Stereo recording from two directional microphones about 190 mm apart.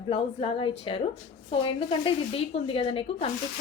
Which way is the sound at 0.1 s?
30° left (ahead or behind).